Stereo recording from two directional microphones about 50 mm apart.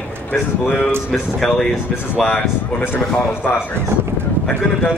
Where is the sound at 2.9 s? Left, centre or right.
Left.